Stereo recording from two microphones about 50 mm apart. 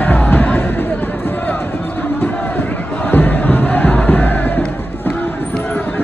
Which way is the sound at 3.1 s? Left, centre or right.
Left.